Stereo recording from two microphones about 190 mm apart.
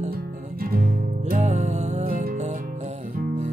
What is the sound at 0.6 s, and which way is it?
Music, 50° right (ahead or behind).